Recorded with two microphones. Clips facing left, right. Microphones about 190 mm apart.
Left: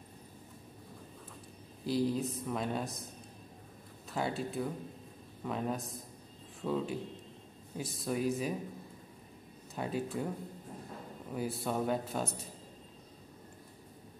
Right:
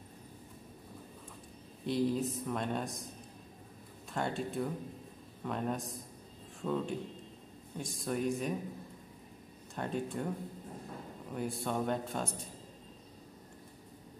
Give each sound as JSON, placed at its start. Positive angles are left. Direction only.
{"t": 1.9, "sound": "speech", "side_deg": 0}
{"t": 4.1, "sound": "speech", "side_deg": 5}
{"t": 9.8, "sound": "speech", "side_deg": 5}
{"t": 11.3, "sound": "speech", "side_deg": 5}